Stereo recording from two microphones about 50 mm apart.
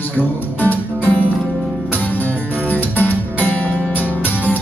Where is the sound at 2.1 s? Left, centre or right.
Left.